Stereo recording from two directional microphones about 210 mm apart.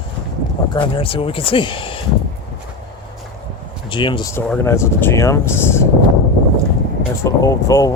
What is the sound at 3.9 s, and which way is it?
Speech, 25° left (ahead or behind).